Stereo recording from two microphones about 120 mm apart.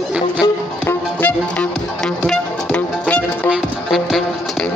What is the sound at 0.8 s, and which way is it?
Music, 10° left (ahead or behind).